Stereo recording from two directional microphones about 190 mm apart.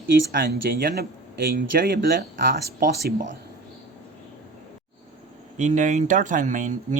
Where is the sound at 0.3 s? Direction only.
50° right (ahead or behind).